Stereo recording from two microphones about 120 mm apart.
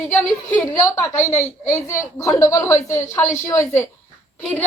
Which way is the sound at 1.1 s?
75° left (ahead or behind).